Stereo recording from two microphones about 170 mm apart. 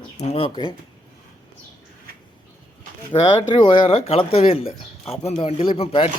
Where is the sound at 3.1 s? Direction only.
30° left (ahead or behind).